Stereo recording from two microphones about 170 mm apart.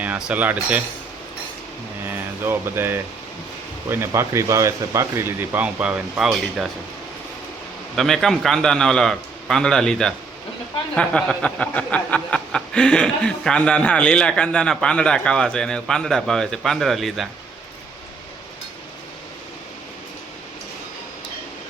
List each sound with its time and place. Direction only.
0.3 s speech: 10° right (ahead or behind)
2.0 s speech: 10° right (ahead or behind)
7.9 s a sound: centre (ahead or behind)